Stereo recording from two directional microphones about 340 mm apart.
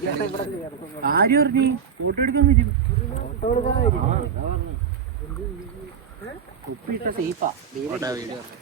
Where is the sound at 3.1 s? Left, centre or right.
Left.